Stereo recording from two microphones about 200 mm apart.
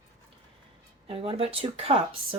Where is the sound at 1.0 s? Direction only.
30° right (ahead or behind).